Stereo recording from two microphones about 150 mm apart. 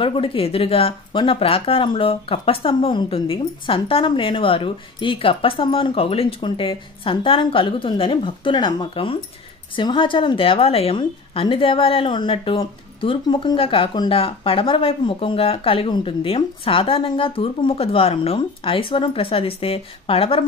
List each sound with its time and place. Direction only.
0.0 s a woman's voice: 35° left (ahead or behind)